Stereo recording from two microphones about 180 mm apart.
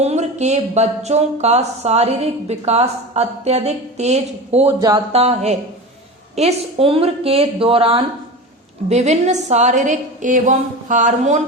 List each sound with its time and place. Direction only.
0.0 s a woman's voice: 40° right (ahead or behind)